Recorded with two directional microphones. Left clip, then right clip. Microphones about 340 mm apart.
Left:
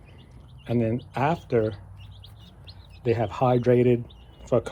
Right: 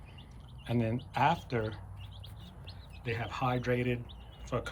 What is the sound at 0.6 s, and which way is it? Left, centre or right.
Speech, centre.